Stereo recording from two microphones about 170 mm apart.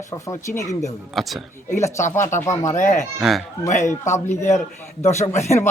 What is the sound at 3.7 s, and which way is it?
A man's voice, 45° left (ahead or behind).